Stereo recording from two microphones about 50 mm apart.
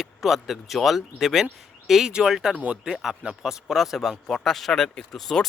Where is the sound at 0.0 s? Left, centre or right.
Centre.